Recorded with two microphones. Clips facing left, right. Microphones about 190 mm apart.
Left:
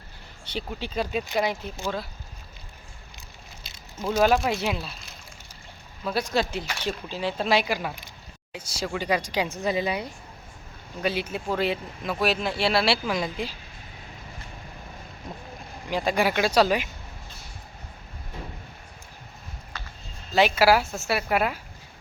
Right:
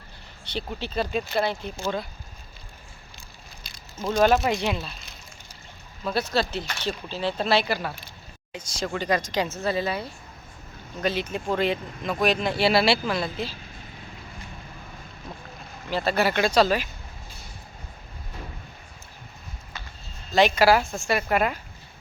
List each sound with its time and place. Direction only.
0.4 s speech: 10° left (ahead or behind)
3.6 s a sound: 25° left (ahead or behind)
4.0 s speech: 5° left (ahead or behind)
6.1 s speech: 10° left (ahead or behind)
13.1 s speech: 15° left (ahead or behind)
15.9 s speech: 15° left (ahead or behind)
20.3 s speech: 5° left (ahead or behind)